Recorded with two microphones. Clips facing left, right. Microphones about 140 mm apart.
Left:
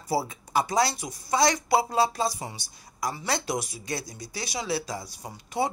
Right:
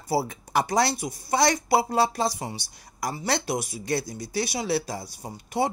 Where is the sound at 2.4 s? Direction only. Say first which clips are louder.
Right 3 dB; 40° right (ahead or behind).